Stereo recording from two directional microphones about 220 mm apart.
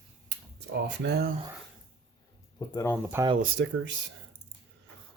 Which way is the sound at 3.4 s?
55° right (ahead or behind).